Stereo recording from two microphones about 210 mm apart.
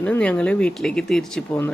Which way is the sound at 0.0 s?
5° left (ahead or behind).